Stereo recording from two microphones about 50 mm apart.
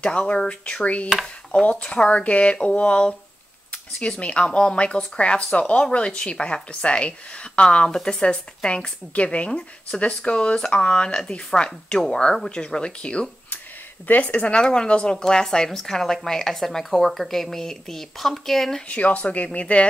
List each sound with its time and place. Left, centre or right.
0.0 s speech: left
4.2 s speech: left
14.0 s speech: left
14.5 s speech: centre
18.9 s speech: left